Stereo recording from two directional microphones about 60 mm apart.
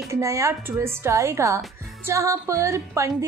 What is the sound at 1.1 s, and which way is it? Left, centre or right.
A woman's voice, right.